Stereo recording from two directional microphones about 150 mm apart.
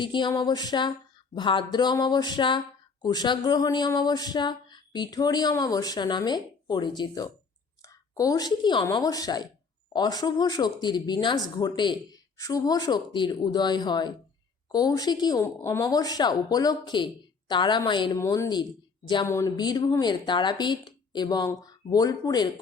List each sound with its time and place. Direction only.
0.0 s a woman's voice: 30° left (ahead or behind)